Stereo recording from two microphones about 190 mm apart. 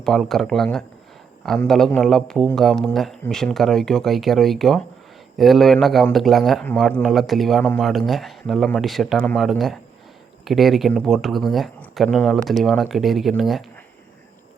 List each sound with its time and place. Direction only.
0.0 s speech: centre (ahead or behind)